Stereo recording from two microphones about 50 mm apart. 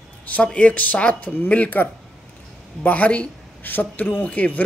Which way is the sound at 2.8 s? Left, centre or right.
Left.